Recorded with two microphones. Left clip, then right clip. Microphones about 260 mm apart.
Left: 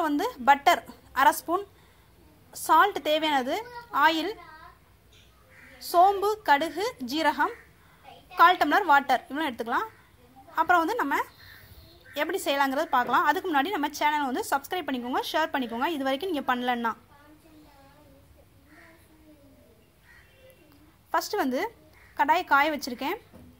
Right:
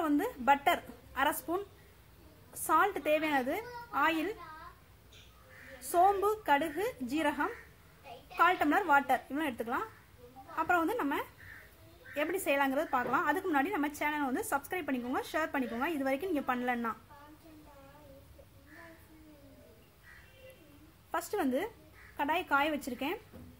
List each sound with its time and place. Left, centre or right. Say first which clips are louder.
0.0 s a woman's voice: left 6 dB; centre
2.6 s a woman's voice: left 8 dB; centre
5.9 s a woman's voice: left 6 dB; centre
21.1 s a woman's voice: left 6 dB; centre